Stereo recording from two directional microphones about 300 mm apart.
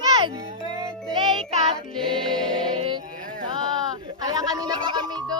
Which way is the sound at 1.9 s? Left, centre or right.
Centre.